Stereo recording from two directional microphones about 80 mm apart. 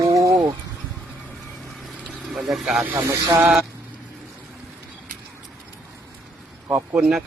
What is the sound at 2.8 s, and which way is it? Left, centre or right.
Speech, right.